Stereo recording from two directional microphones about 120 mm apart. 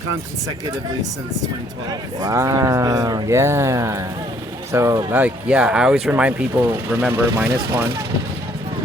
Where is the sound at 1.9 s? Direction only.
30° right (ahead or behind).